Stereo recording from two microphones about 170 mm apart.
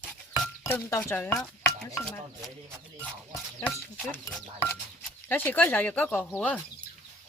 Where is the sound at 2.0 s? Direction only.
Centre (ahead or behind).